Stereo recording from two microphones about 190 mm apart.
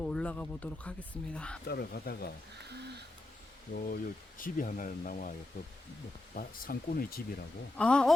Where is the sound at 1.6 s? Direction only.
55° left (ahead or behind).